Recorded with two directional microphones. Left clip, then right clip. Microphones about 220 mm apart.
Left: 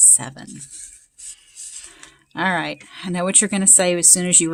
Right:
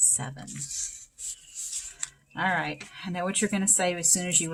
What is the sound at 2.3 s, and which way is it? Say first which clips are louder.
Speech: left 6 dB; 50° left (ahead or behind).